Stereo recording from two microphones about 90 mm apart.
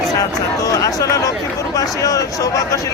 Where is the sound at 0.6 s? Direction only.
40° left (ahead or behind).